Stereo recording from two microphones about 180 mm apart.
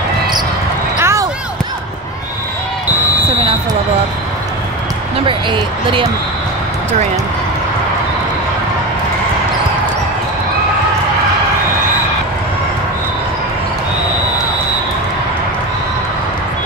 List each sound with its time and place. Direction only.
0.9 s basketball bounce: 15° right (ahead or behind)
5.2 s speech: 30° right (ahead or behind)